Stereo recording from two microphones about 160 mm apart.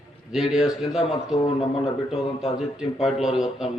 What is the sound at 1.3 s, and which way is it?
Speech, 35° left (ahead or behind).